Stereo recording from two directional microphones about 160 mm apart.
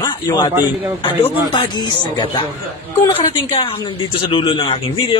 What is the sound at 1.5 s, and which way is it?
A man's voice, 25° left (ahead or behind).